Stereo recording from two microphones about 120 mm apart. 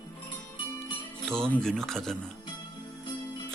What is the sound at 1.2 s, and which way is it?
Speech, 5° left (ahead or behind).